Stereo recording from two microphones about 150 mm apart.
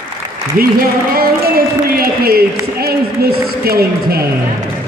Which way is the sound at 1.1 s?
75° right (ahead or behind).